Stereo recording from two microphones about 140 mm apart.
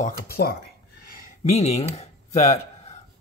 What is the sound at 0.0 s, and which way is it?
Speech, 90° left.